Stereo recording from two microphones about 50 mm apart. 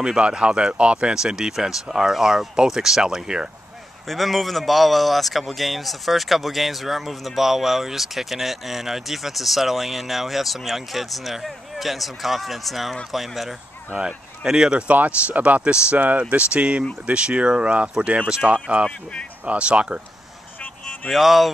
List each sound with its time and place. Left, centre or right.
0.0 s speech: centre
4.1 s speech: centre
13.9 s speech: centre
21.1 s speech: centre